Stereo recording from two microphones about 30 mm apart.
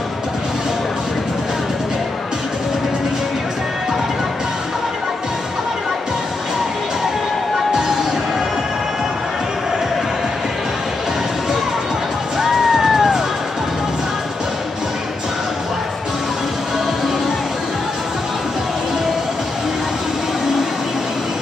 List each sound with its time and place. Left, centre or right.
12.4 s music: centre